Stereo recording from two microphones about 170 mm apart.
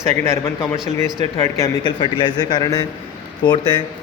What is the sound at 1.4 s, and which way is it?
A man's voice, 20° left (ahead or behind).